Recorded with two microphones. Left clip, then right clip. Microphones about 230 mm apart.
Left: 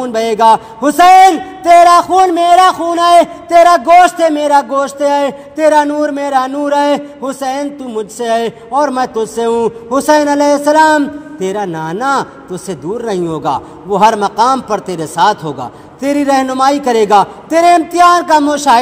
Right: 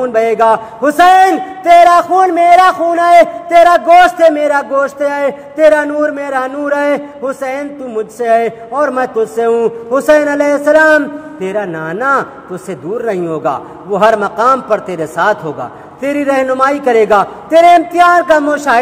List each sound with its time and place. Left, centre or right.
0.0 s a man's voice: left